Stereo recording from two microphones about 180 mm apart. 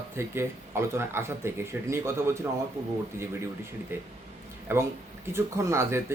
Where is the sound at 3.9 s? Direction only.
10° right (ahead or behind).